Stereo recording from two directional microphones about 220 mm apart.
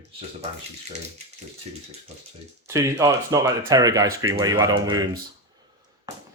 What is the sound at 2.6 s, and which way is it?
Speech, 15° right (ahead or behind).